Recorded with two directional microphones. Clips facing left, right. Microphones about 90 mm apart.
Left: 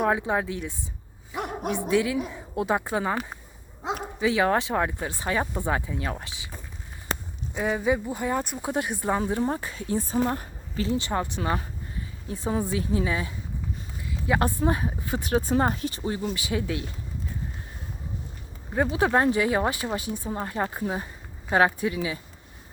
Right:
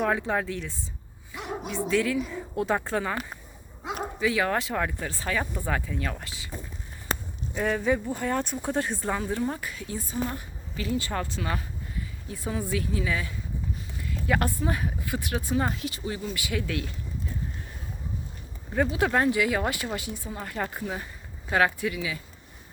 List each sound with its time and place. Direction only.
0.1 s speech: 20° left (ahead or behind)
1.4 s bow-wow: 50° left (ahead or behind)
1.7 s speech: 15° left (ahead or behind)
7.5 s speech: 10° left (ahead or behind)
9.1 s speech: 25° left (ahead or behind)
10.8 s speech: 25° left (ahead or behind)
14.1 s a sound: 20° left (ahead or behind)
14.6 s speech: 30° left (ahead or behind)
18.7 s speech: 25° left (ahead or behind)